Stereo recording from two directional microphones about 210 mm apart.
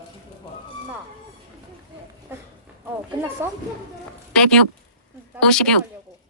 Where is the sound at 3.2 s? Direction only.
10° right (ahead or behind).